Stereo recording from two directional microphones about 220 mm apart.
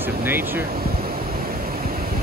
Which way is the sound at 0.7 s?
40° right (ahead or behind).